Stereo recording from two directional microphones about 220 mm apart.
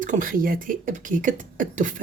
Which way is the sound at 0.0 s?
35° right (ahead or behind).